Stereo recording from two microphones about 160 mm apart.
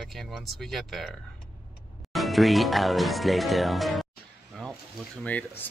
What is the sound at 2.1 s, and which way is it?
Speech, centre (ahead or behind).